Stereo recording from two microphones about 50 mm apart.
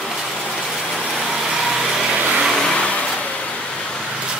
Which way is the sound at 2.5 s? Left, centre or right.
Centre.